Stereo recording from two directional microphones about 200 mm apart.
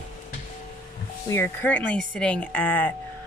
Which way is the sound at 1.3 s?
10° left (ahead or behind).